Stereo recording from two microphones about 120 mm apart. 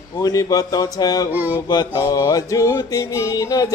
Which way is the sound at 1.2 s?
15° right (ahead or behind).